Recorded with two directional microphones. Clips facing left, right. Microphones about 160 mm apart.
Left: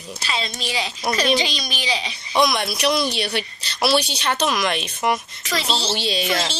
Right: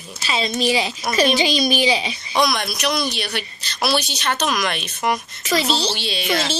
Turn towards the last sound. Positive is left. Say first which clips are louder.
# even
turn(degrees=35)  # may be behind; listen again after turning